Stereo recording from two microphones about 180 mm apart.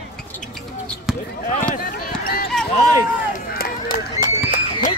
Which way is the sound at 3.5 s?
55° left (ahead or behind).